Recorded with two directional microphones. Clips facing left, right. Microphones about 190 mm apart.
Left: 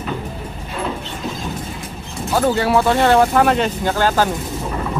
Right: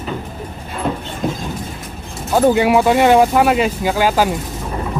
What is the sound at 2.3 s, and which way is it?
Speech, 15° right (ahead or behind).